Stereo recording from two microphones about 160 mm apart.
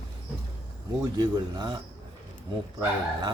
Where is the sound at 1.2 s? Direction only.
25° right (ahead or behind).